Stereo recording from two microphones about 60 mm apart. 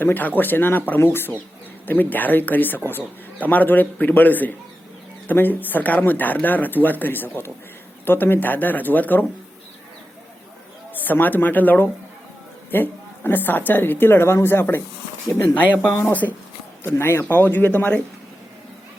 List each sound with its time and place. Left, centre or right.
0.0 s a man's voice: left
10.9 s a man's voice: left
16.2 s a man's voice: left